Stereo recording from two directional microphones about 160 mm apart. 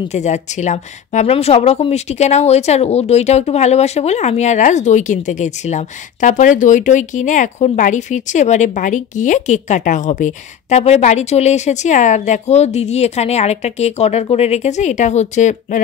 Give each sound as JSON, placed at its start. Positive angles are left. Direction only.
{"t": 0.1, "sound": "speech", "side_deg": 45}